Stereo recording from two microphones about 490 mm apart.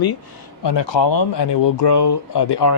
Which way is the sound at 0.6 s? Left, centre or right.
Left.